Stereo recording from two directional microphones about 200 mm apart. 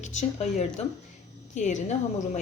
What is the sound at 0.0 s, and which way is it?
A woman's voice, 35° left (ahead or behind).